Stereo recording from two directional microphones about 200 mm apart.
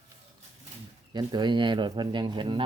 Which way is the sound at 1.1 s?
20° right (ahead or behind).